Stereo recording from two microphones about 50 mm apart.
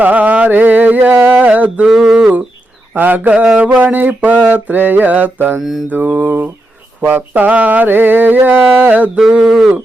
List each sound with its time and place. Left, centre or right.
0.0 s carnatic music: right
1.3 s mantra: right
1.9 s a sound: centre
2.9 s mantra: right
3.3 s mantra: right
5.5 s mantra: centre
5.9 s mantra: right
9.3 s a sound: centre